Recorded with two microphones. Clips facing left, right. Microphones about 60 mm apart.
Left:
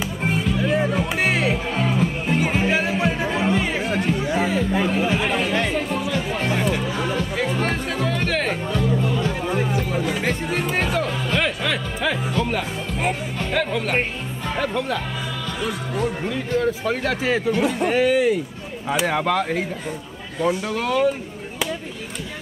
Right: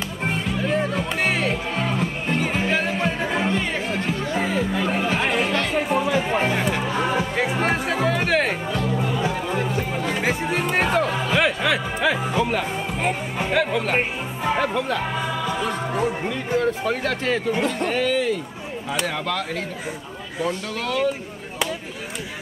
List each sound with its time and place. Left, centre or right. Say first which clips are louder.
0.2 s music: left 2 dB; centre
5.1 s chatter: even; centre
5.9 s music: right 3 dB; centre
6.5 s music: even; centre
9.4 s music: left 1 dB; centre
13.4 s speech: right 3 dB; centre
15.2 s music: right 4 dB; centre
15.6 s speech: left 2 dB; centre